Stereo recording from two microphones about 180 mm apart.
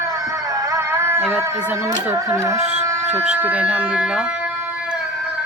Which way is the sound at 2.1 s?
15° right (ahead or behind).